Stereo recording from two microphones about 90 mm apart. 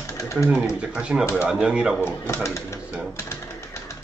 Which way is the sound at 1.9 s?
30° left (ahead or behind).